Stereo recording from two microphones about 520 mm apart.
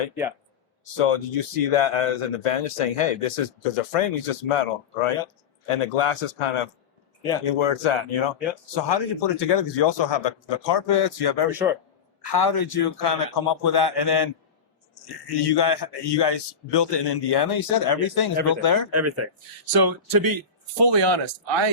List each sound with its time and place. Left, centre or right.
0.9 s speech: left
5.6 s speech: left
8.7 s a man's voice: left
18.9 s speech: right
19.7 s speech: right